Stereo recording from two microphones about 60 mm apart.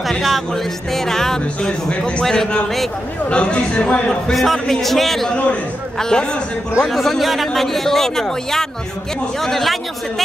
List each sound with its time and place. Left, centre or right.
0.2 s music: centre
2.2 s music: centre
3.3 s music: centre
4.3 s speech: centre
5.3 s music: centre
6.8 s speech: centre